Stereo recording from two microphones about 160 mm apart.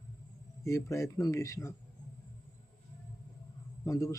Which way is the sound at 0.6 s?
20° left (ahead or behind).